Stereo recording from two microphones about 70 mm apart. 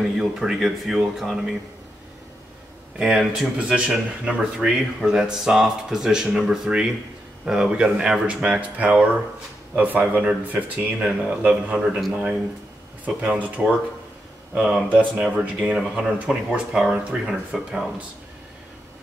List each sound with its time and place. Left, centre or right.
0.2 s speech: centre
3.0 s speech: centre
12.0 s speech: centre
13.0 s speech: centre
14.9 s speech: right
15.2 s speech: centre